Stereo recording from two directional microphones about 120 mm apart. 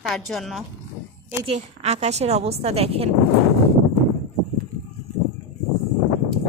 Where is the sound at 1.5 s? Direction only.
65° right (ahead or behind).